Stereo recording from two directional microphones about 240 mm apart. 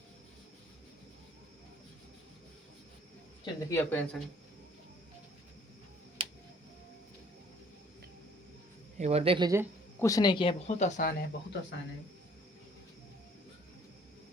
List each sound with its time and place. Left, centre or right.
3.4 s speech: centre
9.0 s speech: right
10.0 s speech: centre; by 11.3 s left